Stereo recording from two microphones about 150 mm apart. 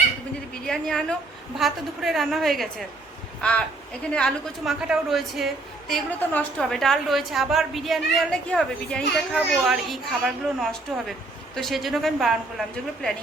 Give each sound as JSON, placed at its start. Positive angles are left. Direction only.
{"t": 0.7, "sound": "a woman's voice", "side_deg": 5}
{"t": 4.1, "sound": "a woman's voice", "side_deg": 0}